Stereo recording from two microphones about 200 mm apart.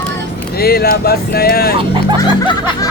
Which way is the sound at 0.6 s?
50° left (ahead or behind).